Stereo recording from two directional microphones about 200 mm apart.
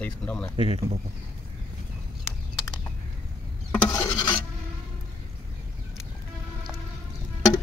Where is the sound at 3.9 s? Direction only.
20° left (ahead or behind).